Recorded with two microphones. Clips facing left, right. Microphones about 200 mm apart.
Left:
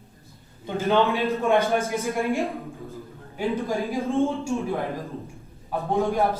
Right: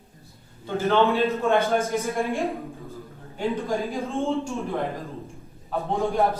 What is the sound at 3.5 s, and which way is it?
Speech, 15° left (ahead or behind).